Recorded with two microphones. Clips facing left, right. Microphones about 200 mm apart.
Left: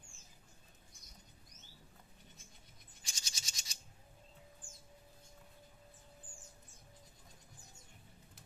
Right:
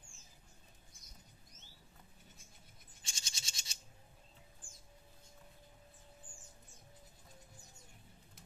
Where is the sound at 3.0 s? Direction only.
30° right (ahead or behind).